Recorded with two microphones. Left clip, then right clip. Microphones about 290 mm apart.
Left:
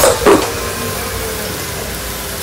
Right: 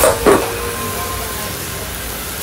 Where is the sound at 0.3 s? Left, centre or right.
Left.